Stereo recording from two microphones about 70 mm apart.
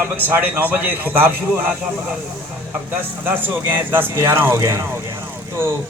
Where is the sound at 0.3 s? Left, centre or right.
Right.